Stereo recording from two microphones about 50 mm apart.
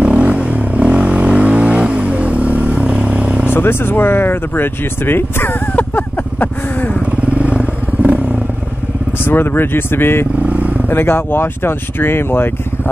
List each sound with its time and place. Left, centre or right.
0.0 s vehicle: right
3.5 s speech: left
5.8 s a sound: left
7.2 s vehicle: right
9.2 s speech: left
10.4 s vehicle: right
10.9 s speech: left